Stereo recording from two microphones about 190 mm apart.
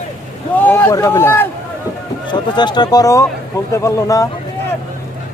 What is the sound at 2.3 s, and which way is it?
Speech, 25° left (ahead or behind).